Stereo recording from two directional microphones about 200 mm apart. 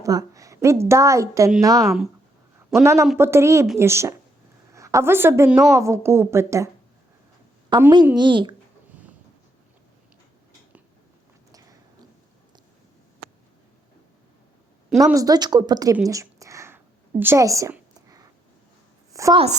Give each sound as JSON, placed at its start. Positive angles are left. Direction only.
{"t": 0.0, "sound": "a woman's voice", "side_deg": -15}
{"t": 5.7, "sound": "a woman's voice", "side_deg": -15}
{"t": 7.7, "sound": "speech", "side_deg": -20}
{"t": 15.0, "sound": "speech", "side_deg": -15}
{"t": 16.0, "sound": "a sound", "side_deg": -15}
{"t": 19.1, "sound": "a woman's voice", "side_deg": -15}